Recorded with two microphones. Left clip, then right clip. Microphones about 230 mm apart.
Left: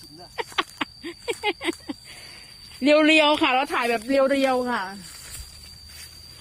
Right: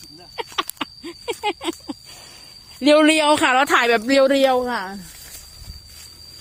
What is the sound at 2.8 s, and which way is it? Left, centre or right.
Speech, right.